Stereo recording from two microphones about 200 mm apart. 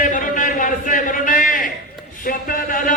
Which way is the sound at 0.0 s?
40° left (ahead or behind).